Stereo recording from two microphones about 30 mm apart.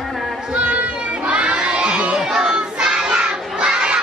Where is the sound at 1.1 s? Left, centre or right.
Right.